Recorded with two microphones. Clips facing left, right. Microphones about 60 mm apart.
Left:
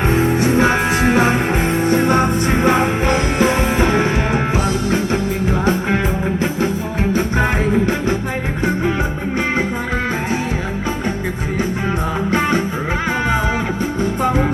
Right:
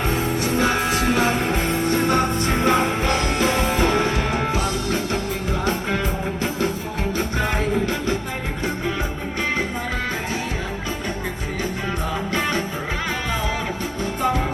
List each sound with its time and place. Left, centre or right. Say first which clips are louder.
0.1 s music: left 7 dB; left
7.1 s music: left 6 dB; left
12.3 s music: left 7 dB; left